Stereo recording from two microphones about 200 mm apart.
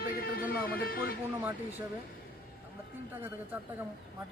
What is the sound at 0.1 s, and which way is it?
Music, 45° left (ahead or behind).